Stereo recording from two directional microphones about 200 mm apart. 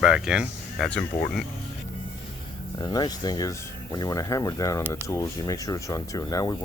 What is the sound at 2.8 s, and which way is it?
Speech, 20° left (ahead or behind).